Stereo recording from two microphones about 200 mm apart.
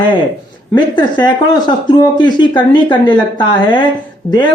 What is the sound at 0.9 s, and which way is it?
Speech, 25° left (ahead or behind).